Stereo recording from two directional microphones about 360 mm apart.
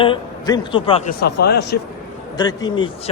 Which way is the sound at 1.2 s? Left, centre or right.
Left.